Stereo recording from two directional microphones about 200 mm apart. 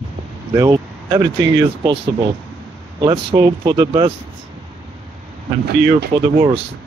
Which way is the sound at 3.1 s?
25° right (ahead or behind).